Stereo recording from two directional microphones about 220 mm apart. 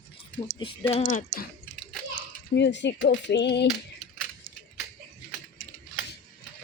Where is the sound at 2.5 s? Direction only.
50° left (ahead or behind).